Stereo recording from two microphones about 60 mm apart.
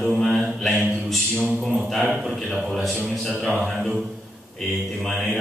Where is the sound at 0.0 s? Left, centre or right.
Centre.